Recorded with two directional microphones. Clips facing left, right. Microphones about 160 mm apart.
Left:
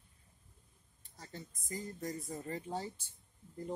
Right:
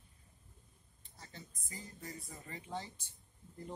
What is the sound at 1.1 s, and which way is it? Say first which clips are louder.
Speech: left 5 dB; 45° left (ahead or behind).